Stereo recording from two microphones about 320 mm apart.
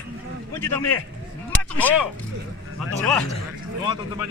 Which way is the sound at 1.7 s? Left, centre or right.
Centre.